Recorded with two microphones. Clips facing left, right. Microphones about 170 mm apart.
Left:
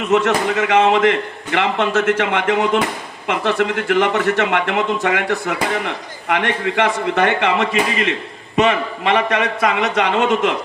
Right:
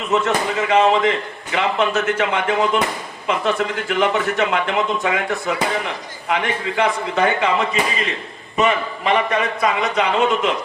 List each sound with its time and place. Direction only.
0.1 s a man's voice: 70° left (ahead or behind)